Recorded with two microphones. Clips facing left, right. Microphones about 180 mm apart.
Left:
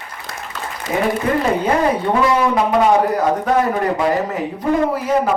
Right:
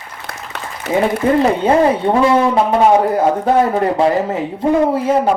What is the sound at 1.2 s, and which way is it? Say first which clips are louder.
Speech: right 6 dB; 25° right (ahead or behind).